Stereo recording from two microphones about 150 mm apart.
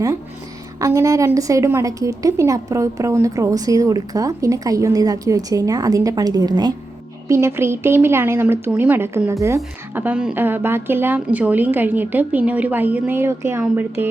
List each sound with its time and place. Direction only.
0.8 s a woman's voice: 20° right (ahead or behind)